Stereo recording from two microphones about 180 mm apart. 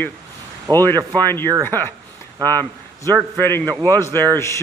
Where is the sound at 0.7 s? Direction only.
20° right (ahead or behind).